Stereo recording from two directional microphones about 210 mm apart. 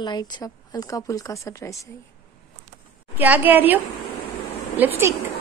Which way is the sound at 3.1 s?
10° right (ahead or behind).